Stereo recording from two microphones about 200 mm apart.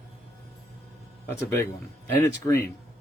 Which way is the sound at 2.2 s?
15° left (ahead or behind).